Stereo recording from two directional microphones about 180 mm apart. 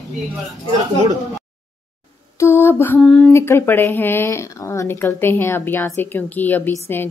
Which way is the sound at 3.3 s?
15° left (ahead or behind).